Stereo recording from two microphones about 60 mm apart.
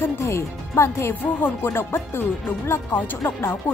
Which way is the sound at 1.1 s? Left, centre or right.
Left.